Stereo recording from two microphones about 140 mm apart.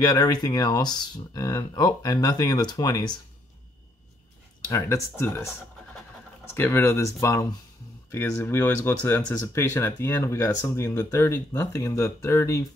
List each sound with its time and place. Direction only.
0.0 s speech: 30° left (ahead or behind)
4.6 s speech: 20° left (ahead or behind)
6.5 s speech: 15° left (ahead or behind)